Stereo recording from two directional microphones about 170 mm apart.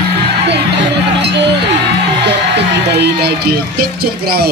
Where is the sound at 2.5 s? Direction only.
75° right (ahead or behind).